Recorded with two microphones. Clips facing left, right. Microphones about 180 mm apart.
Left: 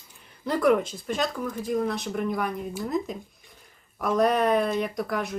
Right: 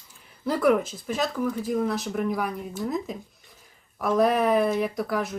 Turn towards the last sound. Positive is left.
turn(degrees=0)  # may be behind; listen again after turning